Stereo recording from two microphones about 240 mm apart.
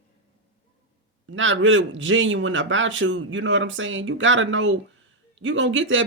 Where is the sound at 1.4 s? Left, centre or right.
Right.